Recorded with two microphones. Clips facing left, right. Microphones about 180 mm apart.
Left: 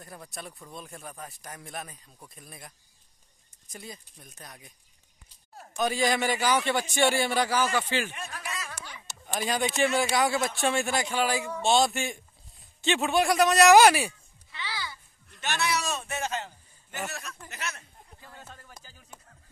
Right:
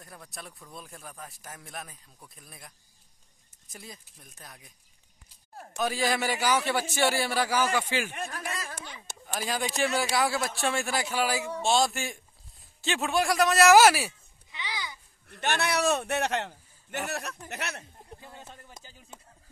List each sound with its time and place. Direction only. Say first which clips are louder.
0.0 s a man's voice: left 3 dB; centre (ahead or behind)
5.8 s a man's voice: left 2 dB; centre (ahead or behind)
8.1 s a sound: right 3 dB; 50° right (ahead or behind)
9.2 s a man's voice: left 3 dB; centre (ahead or behind)
14.5 s a sound: even; 15° right (ahead or behind)
15.2 s a man's voice: right 2 dB; 60° right (ahead or behind)
18.2 s music: left 3 dB; 20° right (ahead or behind)